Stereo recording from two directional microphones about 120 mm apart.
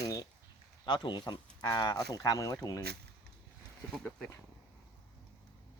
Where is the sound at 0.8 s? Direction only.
35° left (ahead or behind).